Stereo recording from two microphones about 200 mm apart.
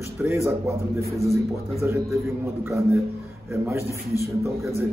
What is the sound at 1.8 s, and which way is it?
Speech, 10° right (ahead or behind).